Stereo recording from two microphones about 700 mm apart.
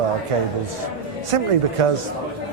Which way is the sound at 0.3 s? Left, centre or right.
Right.